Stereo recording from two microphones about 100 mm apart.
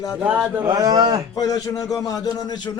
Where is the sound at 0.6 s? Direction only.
40° right (ahead or behind).